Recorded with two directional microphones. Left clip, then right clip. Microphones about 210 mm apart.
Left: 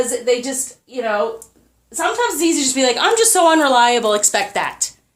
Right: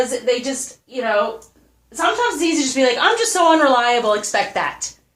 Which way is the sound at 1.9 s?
45° left (ahead or behind).